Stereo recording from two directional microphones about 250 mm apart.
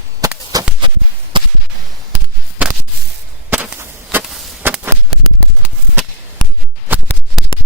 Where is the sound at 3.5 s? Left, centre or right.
Centre.